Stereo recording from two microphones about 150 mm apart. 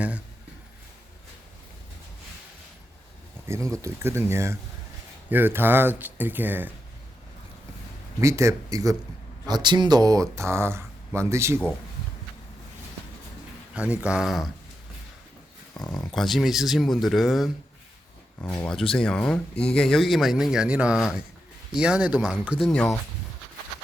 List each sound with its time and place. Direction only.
3.4 s speech: 20° right (ahead or behind)
8.2 s speech: 20° right (ahead or behind)
13.7 s speech: 10° right (ahead or behind)
16.1 s speech: centre (ahead or behind)
18.6 s speech: 5° left (ahead or behind)